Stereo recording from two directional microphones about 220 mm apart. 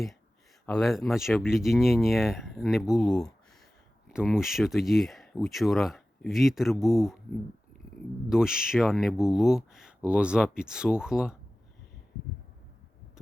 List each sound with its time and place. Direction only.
0.6 s speech: 5° left (ahead or behind)
8.3 s speech: 5° right (ahead or behind)